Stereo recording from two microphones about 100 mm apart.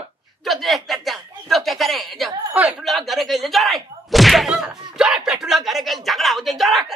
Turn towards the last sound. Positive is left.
turn(degrees=0)  # may be behind; listen again after turning